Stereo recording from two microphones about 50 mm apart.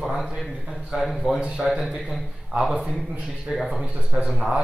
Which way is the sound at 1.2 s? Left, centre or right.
Centre.